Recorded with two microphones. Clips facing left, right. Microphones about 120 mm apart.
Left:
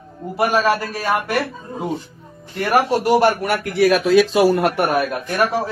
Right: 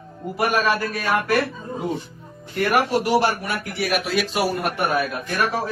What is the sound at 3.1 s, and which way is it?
Speech, 50° left (ahead or behind).